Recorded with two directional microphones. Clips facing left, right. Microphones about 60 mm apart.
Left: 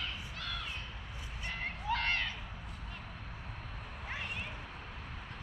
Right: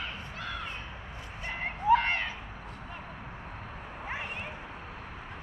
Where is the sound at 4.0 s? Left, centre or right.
Right.